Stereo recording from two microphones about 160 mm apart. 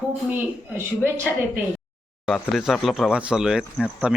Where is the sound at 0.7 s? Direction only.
15° right (ahead or behind).